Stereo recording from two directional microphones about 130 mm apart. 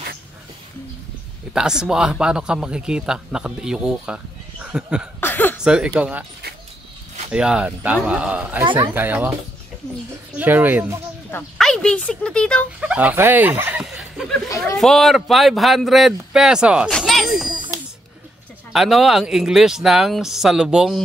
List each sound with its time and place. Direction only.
1.5 s speech: 5° right (ahead or behind)
5.2 s chuckle: 15° left (ahead or behind)
5.6 s speech: 5° right (ahead or behind)
7.2 s speech: 10° right (ahead or behind)
10.3 s speech: 15° right (ahead or behind)
11.5 s speech: 5° left (ahead or behind)
12.8 s speech: 10° right (ahead or behind)
13.8 s chuckle: centre (ahead or behind)
14.8 s speech: centre (ahead or behind)
16.9 s a sound: centre (ahead or behind)
18.7 s speech: centre (ahead or behind)